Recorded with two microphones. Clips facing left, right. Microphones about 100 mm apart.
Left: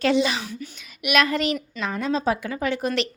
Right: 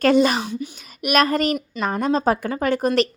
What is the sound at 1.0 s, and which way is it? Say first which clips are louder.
A woman's voice: right 3 dB; 40° right (ahead or behind).